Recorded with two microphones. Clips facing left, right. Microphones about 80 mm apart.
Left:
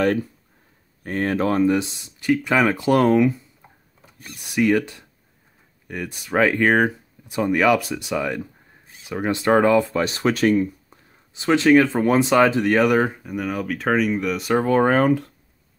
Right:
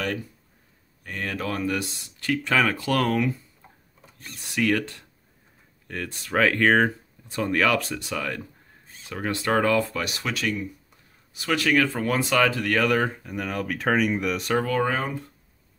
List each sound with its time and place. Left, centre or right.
1.0 s speech: left
4.0 s speech: centre
9.9 s speech: left
11.3 s speech: left; by 14.5 s centre
14.5 s speech: left
14.8 s speech: left